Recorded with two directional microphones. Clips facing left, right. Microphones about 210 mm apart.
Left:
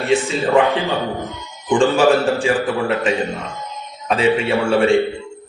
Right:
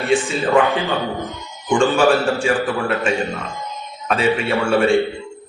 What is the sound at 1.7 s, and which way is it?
A man's voice, 15° left (ahead or behind).